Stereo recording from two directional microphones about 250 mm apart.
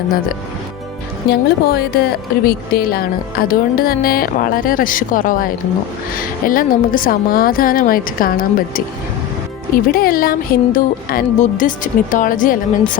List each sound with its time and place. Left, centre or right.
1.3 s speech: left